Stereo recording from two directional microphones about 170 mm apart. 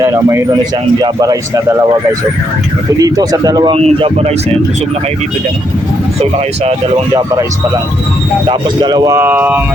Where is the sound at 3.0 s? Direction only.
20° right (ahead or behind).